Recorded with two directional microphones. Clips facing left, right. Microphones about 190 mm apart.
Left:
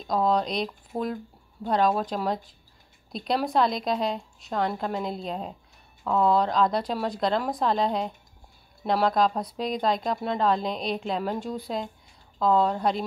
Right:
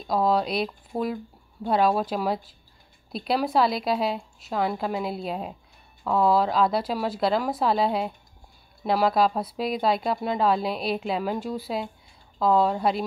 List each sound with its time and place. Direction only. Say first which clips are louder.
0.0 s speech: right 1 dB; 5° right (ahead or behind)